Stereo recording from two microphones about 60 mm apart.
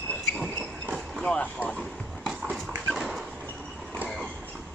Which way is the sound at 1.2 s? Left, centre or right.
Centre.